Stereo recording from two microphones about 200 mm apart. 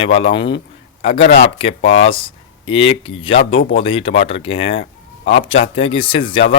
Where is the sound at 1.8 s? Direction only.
80° left.